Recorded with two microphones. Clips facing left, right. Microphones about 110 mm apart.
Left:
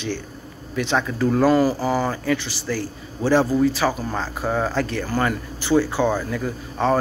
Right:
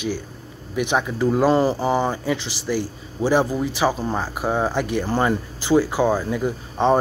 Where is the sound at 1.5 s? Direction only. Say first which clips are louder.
Even; 25° right (ahead or behind).